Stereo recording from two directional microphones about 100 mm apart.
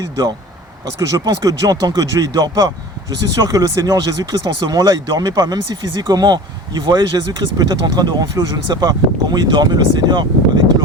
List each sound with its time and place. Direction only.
0.9 s speech: 35° right (ahead or behind)